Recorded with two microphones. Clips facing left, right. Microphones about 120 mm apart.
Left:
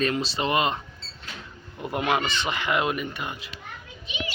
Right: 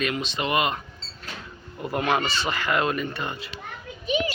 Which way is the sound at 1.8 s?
20° left (ahead or behind).